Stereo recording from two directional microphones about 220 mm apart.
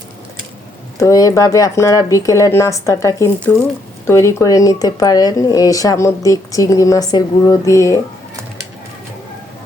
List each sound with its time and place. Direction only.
0.9 s speech: 15° left (ahead or behind)